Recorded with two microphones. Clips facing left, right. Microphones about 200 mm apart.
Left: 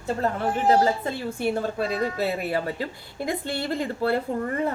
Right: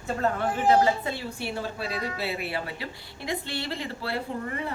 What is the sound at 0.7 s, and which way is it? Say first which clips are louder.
A woman's voice: left 1 dB; 45° left (ahead or behind).